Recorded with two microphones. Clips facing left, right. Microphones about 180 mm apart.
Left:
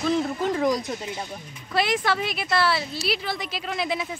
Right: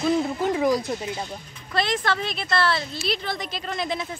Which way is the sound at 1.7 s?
10° left (ahead or behind).